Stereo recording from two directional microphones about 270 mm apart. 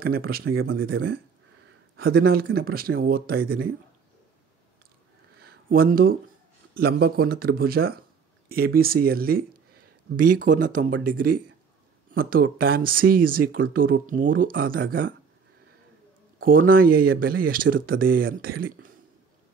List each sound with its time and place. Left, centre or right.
0.0 s speech: right
0.6 s speech: right
2.0 s speech: right
5.4 s a sound: right
6.8 s speech: right
16.6 s speech: right